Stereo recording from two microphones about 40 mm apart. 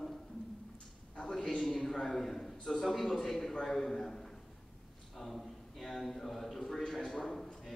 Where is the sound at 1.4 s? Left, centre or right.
Centre.